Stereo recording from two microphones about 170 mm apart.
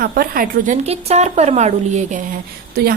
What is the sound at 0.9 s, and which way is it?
Speech, 40° right (ahead or behind).